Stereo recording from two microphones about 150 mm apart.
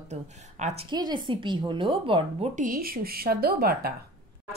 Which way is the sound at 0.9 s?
30° right (ahead or behind).